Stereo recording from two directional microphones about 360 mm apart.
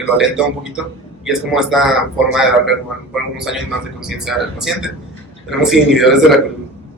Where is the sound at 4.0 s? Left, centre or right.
Centre.